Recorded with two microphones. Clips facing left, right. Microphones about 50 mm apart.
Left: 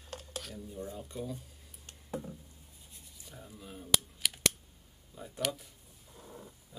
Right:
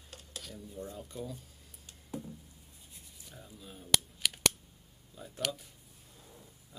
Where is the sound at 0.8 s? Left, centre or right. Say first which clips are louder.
Left 2 dB; centre.